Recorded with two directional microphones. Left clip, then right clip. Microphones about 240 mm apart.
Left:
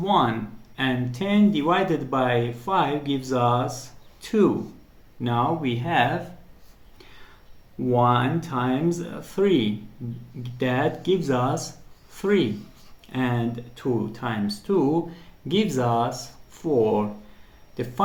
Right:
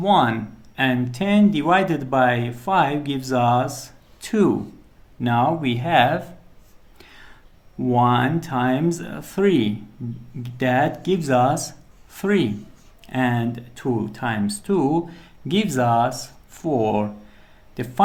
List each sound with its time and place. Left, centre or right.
0.0 s speech: right
7.0 s whispering: right
7.9 s speech: right